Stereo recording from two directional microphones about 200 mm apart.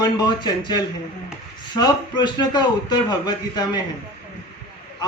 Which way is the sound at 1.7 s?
20° left (ahead or behind).